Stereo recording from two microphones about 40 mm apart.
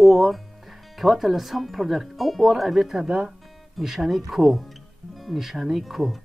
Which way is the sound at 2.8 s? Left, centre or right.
Centre.